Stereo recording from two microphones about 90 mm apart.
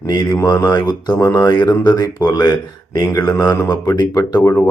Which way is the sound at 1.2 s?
35° left (ahead or behind).